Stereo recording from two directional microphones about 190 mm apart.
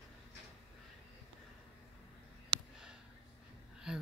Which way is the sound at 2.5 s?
25° right (ahead or behind).